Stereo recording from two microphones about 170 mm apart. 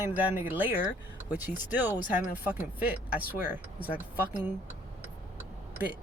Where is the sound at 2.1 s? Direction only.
10° right (ahead or behind).